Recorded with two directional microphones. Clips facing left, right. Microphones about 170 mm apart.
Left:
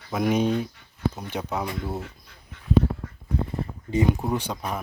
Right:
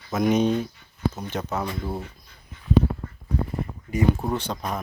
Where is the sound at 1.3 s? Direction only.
10° left (ahead or behind).